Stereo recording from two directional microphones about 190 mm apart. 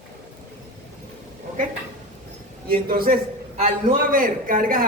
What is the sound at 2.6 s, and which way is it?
A man's voice, 50° right (ahead or behind).